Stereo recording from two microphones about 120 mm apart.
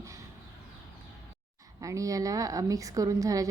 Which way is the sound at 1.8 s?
25° right (ahead or behind).